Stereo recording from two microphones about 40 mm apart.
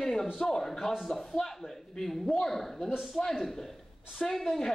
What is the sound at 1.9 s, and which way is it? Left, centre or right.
A woman's voice, centre.